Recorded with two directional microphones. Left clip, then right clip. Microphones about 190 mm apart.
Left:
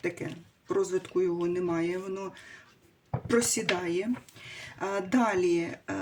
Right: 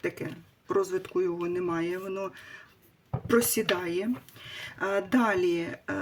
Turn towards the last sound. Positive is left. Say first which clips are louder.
# left 1 dB
turn(degrees=-25)  # may be behind; listen again after turning